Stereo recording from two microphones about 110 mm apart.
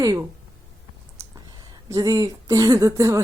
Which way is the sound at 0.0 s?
30° right (ahead or behind).